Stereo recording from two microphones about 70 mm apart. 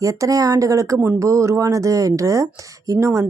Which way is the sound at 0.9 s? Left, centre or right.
Right.